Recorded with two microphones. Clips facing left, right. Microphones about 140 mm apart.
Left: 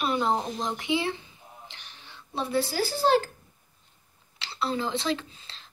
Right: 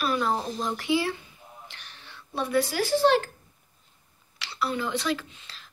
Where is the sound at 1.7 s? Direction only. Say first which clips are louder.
Right 1 dB; 20° left (ahead or behind).